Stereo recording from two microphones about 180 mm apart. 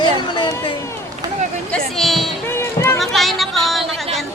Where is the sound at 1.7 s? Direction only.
5° left (ahead or behind).